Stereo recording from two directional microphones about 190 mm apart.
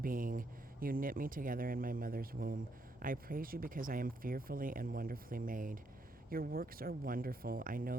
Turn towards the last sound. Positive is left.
turn(degrees=-50)  # may be behind; listen again after turning